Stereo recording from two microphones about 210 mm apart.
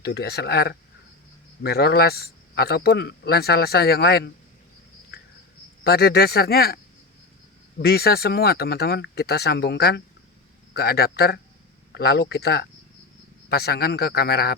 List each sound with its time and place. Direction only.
0.0 s speech: 50° left (ahead or behind)
5.8 s speech: 50° left (ahead or behind)
7.8 s speech: 50° left (ahead or behind)